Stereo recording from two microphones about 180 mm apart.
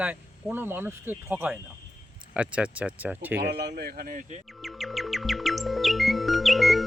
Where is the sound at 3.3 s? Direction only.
65° right (ahead or behind); by 4.4 s 45° right (ahead or behind).